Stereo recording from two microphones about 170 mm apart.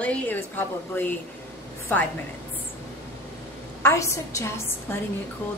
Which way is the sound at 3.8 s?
15° left (ahead or behind).